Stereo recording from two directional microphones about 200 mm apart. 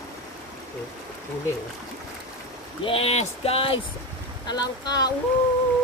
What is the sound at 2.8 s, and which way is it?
Speech, 30° left (ahead or behind).